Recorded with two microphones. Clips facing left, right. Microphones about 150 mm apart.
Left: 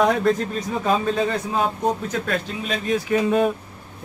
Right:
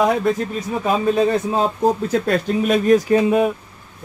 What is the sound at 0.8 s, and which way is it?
Speech, 20° right (ahead or behind).